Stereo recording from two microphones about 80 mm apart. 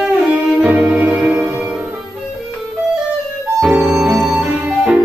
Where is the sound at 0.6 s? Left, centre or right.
Centre.